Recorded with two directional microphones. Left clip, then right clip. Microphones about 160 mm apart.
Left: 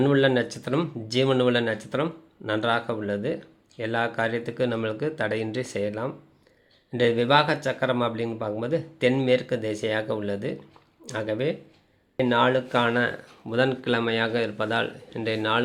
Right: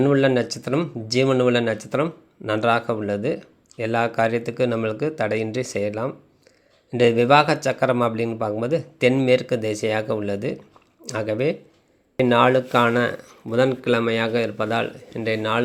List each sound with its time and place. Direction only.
0.0 s speech: 15° right (ahead or behind)